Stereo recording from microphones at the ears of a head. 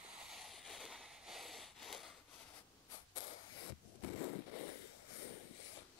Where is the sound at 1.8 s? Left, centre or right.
Left.